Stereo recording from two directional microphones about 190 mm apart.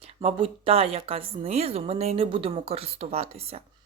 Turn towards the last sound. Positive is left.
turn(degrees=-30)  # may be behind; listen again after turning